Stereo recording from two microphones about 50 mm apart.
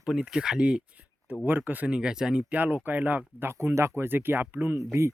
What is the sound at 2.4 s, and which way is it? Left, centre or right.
Speech, right.